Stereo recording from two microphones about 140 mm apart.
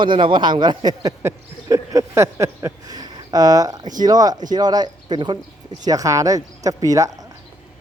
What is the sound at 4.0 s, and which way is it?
Speech, 25° right (ahead or behind).